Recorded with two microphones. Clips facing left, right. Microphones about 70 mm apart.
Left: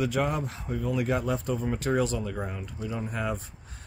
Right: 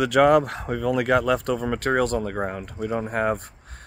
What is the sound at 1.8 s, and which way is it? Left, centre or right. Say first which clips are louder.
Speech: right 5 dB; right.